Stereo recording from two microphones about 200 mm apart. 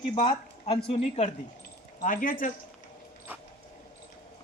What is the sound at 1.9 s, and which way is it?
Speech, 45° left (ahead or behind).